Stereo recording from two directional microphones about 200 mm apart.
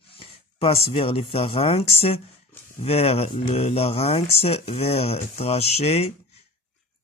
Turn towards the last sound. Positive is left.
turn(degrees=30)  # may be behind; listen again after turning